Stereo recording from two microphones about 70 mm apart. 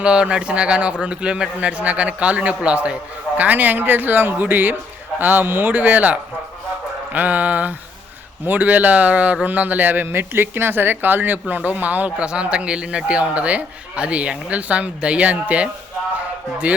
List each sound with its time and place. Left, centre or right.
0.0 s a man's voice: centre